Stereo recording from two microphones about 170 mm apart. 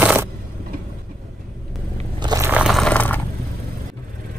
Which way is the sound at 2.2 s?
25° right (ahead or behind).